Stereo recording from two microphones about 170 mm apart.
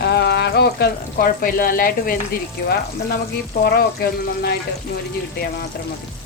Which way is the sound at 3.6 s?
65° left (ahead or behind).